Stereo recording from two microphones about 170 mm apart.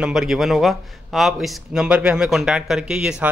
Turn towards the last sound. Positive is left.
turn(degrees=-5)  # may be behind; listen again after turning